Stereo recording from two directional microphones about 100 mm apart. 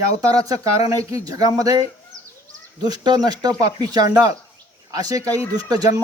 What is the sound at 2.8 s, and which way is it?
Speech, 45° right (ahead or behind).